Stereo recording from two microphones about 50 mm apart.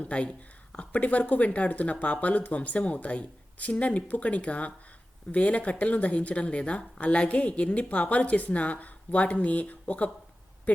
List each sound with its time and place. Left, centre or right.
0.0 s speech: left